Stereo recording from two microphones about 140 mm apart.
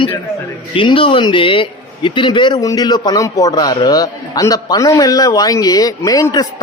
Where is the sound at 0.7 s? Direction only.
40° left (ahead or behind).